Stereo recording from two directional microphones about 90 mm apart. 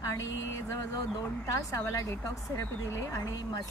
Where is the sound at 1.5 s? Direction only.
40° left (ahead or behind).